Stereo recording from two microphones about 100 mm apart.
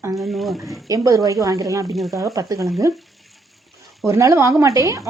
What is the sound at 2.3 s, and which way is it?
Speech, 35° right (ahead or behind).